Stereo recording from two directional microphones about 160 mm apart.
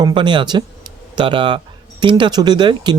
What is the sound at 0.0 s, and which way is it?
Speech, 30° right (ahead or behind).